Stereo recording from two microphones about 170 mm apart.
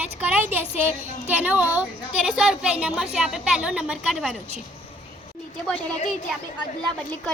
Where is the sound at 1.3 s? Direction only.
10° right (ahead or behind).